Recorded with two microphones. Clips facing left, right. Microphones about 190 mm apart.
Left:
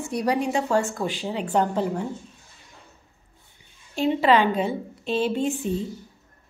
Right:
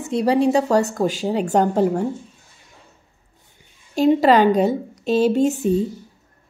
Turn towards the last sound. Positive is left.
turn(degrees=-40)  # may be behind; listen again after turning